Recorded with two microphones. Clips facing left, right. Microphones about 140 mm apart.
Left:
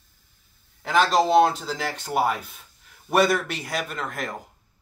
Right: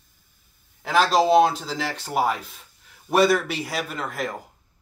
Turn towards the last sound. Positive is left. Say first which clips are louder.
# right 2 dB
turn(degrees=0)  # may be behind; listen again after turning